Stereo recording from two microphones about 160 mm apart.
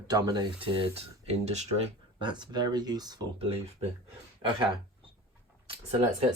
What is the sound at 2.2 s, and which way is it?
Speech, 30° right (ahead or behind).